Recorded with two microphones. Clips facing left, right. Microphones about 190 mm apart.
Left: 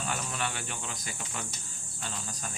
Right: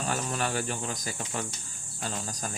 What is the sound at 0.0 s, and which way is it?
Speech, 40° right (ahead or behind).